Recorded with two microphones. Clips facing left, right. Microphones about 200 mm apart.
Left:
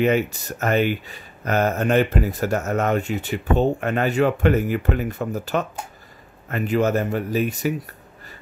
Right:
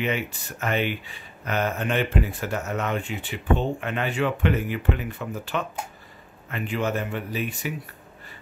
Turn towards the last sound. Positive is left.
turn(degrees=40)  # may be behind; listen again after turning